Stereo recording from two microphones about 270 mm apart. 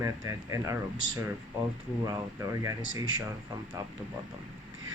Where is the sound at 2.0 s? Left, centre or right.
Centre.